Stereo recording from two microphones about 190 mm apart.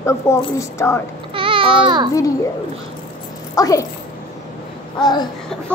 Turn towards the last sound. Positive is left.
turn(degrees=20)  # may be behind; listen again after turning